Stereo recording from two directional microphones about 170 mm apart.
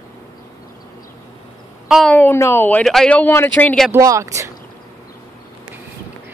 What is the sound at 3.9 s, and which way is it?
Speech, 20° right (ahead or behind).